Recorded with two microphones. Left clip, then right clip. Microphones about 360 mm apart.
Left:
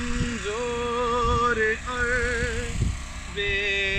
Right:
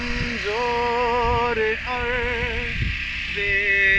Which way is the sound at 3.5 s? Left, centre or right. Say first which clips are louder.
Right 7 dB; centre.